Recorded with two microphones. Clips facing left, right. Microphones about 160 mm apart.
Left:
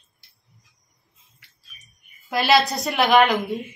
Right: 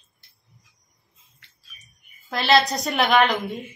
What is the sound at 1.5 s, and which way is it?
A woman's voice, centre (ahead or behind).